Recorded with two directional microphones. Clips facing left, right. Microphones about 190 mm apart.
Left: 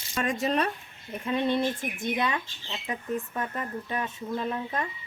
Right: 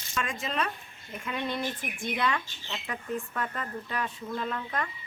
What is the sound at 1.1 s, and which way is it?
Speech, 30° left (ahead or behind).